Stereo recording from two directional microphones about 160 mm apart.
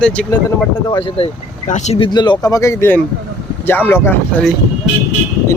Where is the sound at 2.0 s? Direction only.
25° left (ahead or behind).